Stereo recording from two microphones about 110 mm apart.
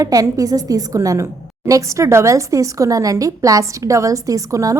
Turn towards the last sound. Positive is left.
turn(degrees=-30)  # may be behind; listen again after turning